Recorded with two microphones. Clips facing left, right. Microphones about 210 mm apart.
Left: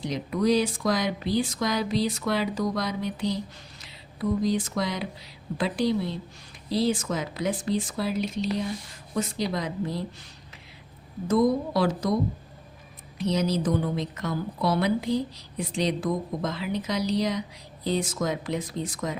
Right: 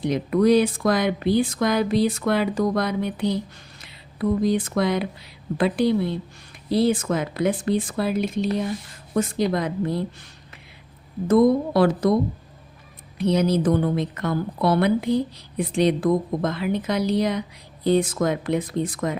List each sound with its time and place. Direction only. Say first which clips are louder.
0.0 s a woman's voice: right 6 dB; 55° right (ahead or behind)
11.3 s speech: right 5 dB; 55° right (ahead or behind)
13.1 s speech: right 5 dB; 55° right (ahead or behind)